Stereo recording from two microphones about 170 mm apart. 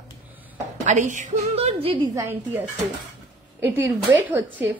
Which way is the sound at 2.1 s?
15° right (ahead or behind).